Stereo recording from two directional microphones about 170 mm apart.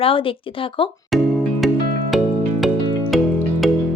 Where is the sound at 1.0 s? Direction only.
Centre (ahead or behind).